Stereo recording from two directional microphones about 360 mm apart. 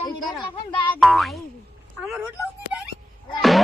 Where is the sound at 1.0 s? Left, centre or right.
Centre.